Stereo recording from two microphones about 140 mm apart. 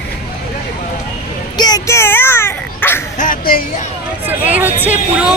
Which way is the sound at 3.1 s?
75° left (ahead or behind).